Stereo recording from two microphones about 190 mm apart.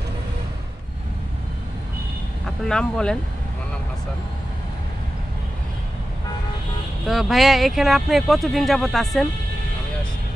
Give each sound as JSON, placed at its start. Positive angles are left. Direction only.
{"t": 2.4, "sound": "speech", "side_deg": 5}
{"t": 7.1, "sound": "speech", "side_deg": 0}